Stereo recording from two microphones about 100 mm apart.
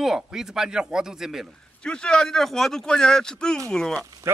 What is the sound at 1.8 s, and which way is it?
A man's voice, 10° left (ahead or behind).